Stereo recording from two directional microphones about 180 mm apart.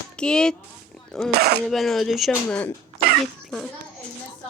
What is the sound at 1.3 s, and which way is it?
Speech, 60° right (ahead or behind).